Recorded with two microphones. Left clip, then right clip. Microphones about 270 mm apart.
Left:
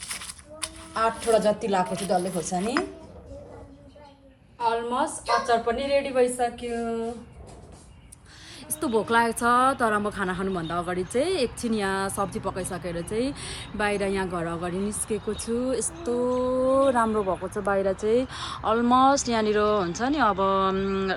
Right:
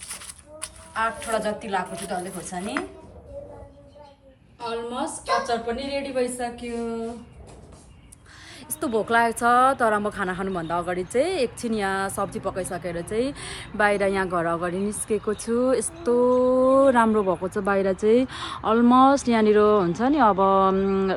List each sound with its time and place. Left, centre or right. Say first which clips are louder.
0.9 s a woman's voice: left 3 dB; centre
4.7 s a woman's voice: left 1 dB; centre
8.8 s a woman's voice: right 1 dB; centre
16.1 s speech: right 6 dB; right